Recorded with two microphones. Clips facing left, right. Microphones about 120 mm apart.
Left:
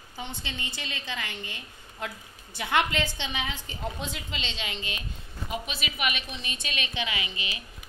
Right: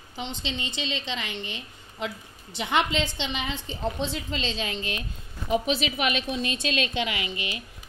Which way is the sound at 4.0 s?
Centre (ahead or behind).